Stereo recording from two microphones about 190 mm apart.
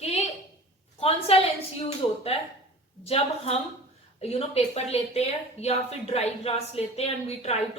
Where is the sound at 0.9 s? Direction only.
30° left (ahead or behind).